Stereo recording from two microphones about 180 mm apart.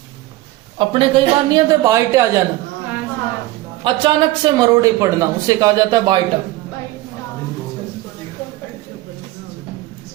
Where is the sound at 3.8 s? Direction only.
25° right (ahead or behind).